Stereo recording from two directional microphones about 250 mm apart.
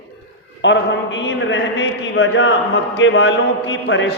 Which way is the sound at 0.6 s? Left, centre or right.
Left.